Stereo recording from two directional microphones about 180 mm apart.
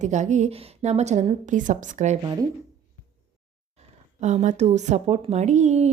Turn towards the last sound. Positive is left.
turn(degrees=-40)  # may be behind; listen again after turning